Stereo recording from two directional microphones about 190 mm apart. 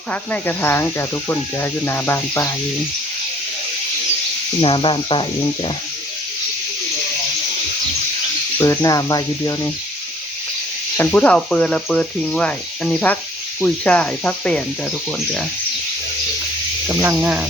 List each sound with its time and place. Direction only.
0.1 s speech: 10° left (ahead or behind)
4.6 s speech: 25° left (ahead or behind)
8.5 s speech: 15° left (ahead or behind)
10.9 s speech: 10° left (ahead or behind)
16.9 s speech: 10° right (ahead or behind)